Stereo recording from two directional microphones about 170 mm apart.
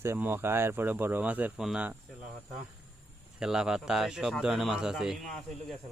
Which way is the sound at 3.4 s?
5° right (ahead or behind).